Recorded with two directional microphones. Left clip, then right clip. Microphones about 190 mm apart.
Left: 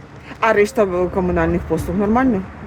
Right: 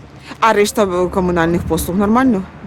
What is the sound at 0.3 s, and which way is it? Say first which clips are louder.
Speech: right 2 dB; 25° right (ahead or behind).